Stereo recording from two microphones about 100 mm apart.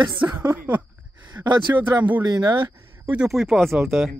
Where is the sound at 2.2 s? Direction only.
45° right (ahead or behind).